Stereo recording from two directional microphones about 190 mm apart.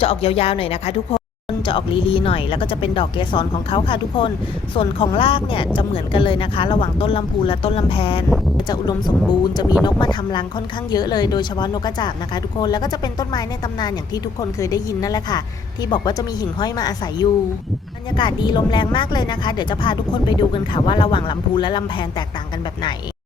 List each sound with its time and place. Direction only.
0.0 s speech: 30° left (ahead or behind)